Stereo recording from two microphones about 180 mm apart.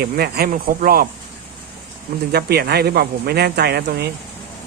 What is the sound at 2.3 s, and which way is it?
Speech, 65° right (ahead or behind).